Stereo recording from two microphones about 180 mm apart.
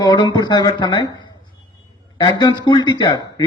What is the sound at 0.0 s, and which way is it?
Speech, 20° left (ahead or behind).